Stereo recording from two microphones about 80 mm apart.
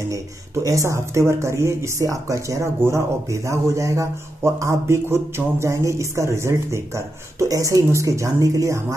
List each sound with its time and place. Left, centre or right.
0.7 s speech: right